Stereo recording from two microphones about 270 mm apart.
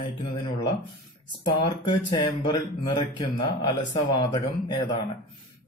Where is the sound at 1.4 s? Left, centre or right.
Centre.